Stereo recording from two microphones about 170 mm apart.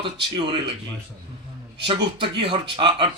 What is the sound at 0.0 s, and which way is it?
Speech, 30° right (ahead or behind).